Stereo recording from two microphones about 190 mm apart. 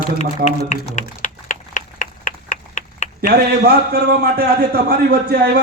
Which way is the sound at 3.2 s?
55° right (ahead or behind).